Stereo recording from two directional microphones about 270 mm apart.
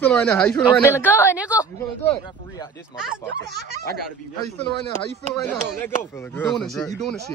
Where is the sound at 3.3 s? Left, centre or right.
Right.